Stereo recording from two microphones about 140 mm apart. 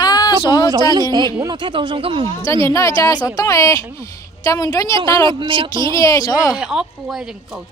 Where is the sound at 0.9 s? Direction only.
30° right (ahead or behind).